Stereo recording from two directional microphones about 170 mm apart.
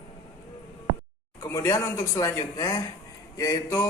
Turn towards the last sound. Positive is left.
turn(degrees=20)  # may be behind; listen again after turning